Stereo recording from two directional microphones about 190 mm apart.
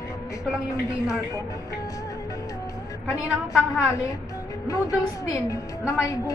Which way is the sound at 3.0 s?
15° left (ahead or behind).